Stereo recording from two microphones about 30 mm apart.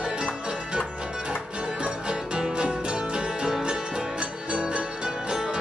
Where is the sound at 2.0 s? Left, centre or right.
Right.